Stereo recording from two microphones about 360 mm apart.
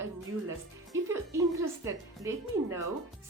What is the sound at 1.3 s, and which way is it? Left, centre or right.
A woman's voice, centre.